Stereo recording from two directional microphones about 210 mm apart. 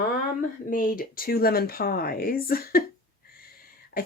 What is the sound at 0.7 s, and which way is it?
Speech, 40° left (ahead or behind).